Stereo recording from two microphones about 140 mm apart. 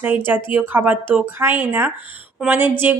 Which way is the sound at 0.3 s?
15° right (ahead or behind).